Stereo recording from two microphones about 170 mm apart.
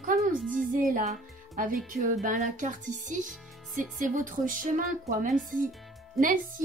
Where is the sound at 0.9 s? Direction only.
55° right (ahead or behind).